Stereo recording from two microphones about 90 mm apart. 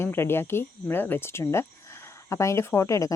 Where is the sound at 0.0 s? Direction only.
25° left (ahead or behind).